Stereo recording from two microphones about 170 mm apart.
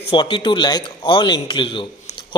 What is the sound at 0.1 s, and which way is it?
A man's voice, 25° left (ahead or behind).